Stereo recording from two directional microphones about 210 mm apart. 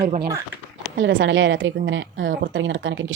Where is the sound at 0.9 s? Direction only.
60° right (ahead or behind).